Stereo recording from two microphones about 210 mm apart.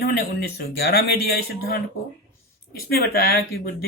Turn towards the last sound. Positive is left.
turn(degrees=45)  # may be behind; listen again after turning